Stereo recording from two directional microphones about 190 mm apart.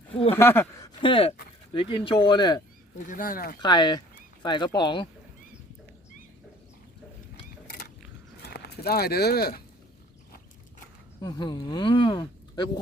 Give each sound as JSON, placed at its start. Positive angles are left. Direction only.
{"t": 0.3, "sound": "speech", "side_deg": 10}
{"t": 1.0, "sound": "speech", "side_deg": 30}
{"t": 3.1, "sound": "speech", "side_deg": 45}
{"t": 3.6, "sound": "speech", "side_deg": 25}
{"t": 8.4, "sound": "speech", "side_deg": 60}
{"t": 11.2, "sound": "speech", "side_deg": 20}